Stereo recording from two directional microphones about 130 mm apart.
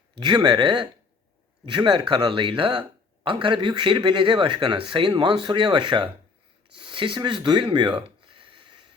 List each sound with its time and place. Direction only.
0.2 s speech: 35° right (ahead or behind)